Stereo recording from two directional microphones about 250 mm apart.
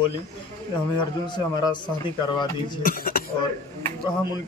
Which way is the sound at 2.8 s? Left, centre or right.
Left.